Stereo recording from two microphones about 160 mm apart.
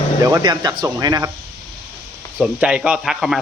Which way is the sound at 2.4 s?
5° right (ahead or behind).